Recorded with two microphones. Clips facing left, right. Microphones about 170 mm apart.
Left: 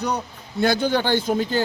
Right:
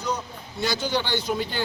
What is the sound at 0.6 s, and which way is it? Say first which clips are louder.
A man's voice: left 6 dB; 55° left (ahead or behind).